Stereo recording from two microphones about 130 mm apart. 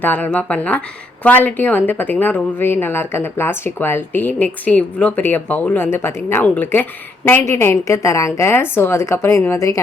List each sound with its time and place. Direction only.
0.0 s a woman's voice: 15° left (ahead or behind)